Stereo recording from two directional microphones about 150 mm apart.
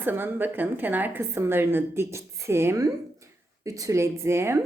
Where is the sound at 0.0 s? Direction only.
15° right (ahead or behind).